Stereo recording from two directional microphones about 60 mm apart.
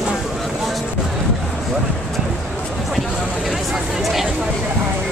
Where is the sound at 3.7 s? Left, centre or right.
Centre.